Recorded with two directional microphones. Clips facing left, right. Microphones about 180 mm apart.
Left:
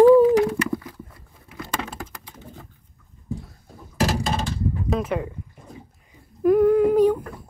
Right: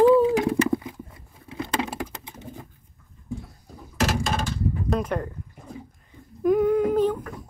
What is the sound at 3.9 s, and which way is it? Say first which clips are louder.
Door: left 2 dB; 35° left (ahead or behind).